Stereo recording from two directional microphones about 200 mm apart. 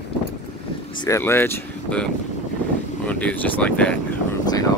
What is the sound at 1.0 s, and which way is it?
Speech, 15° left (ahead or behind).